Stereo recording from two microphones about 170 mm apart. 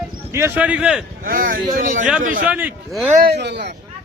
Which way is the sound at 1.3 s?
55° right (ahead or behind).